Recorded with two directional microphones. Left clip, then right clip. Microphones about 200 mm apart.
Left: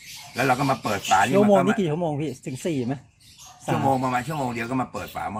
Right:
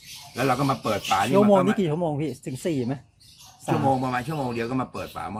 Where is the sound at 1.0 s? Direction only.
5° left (ahead or behind).